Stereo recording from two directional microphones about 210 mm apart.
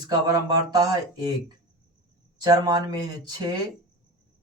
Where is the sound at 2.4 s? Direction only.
20° right (ahead or behind).